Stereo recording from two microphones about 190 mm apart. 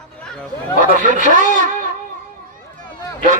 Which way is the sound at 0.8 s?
40° right (ahead or behind).